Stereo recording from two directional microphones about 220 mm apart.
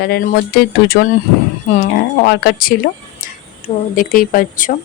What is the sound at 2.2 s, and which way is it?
Speech, 45° left (ahead or behind).